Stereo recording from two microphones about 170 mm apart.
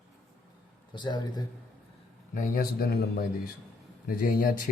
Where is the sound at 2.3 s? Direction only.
55° left (ahead or behind).